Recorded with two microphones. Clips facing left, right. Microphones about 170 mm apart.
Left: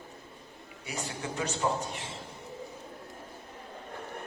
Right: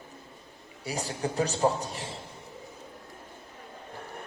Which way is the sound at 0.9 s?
35° right (ahead or behind).